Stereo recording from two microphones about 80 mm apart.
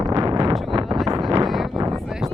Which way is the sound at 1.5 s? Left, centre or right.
Centre.